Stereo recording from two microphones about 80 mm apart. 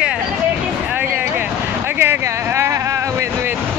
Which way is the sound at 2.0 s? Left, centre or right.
Right.